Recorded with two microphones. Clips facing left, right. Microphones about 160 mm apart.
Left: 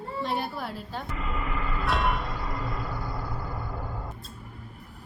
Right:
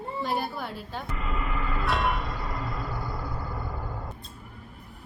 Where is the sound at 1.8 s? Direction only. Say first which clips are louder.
Even; centre (ahead or behind).